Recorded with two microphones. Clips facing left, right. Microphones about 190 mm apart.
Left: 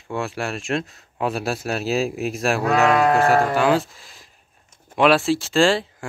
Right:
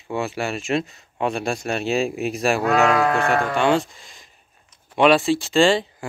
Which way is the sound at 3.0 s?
35° left (ahead or behind).